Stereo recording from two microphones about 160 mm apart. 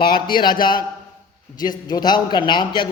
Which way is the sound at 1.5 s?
25° left (ahead or behind).